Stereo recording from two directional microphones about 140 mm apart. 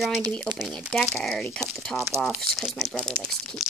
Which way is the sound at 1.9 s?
20° right (ahead or behind).